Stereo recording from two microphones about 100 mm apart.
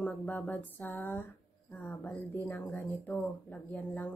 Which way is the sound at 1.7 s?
15° left (ahead or behind).